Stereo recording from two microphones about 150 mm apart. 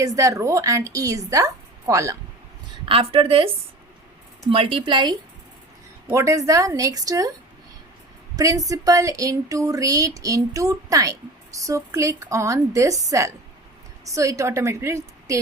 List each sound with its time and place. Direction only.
0.0 s speech: 20° right (ahead or behind)
2.8 s a woman's voice: 40° right (ahead or behind)
4.5 s a woman's voice: 40° right (ahead or behind)
6.1 s speech: 20° right (ahead or behind)
8.4 s speech: 25° right (ahead or behind)